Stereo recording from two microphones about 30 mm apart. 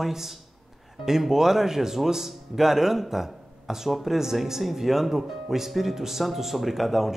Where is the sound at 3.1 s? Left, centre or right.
Centre.